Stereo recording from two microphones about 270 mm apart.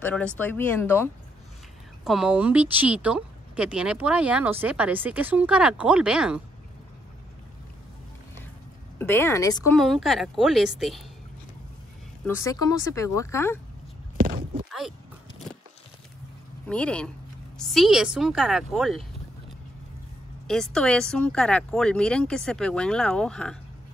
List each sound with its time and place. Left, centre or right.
0.0 s speech: centre
2.0 s speech: centre
8.9 s speech: centre
9.8 s speech: centre
12.3 s speech: centre
14.1 s a sound: right
14.7 s a sound: centre
16.6 s speech: centre
20.4 s speech: centre